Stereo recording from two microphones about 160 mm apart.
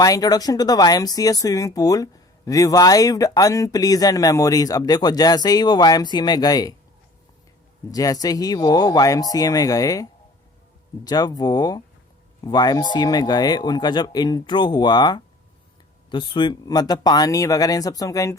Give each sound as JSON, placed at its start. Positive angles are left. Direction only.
{"t": 0.0, "sound": "speech", "side_deg": 20}
{"t": 7.9, "sound": "speech", "side_deg": 20}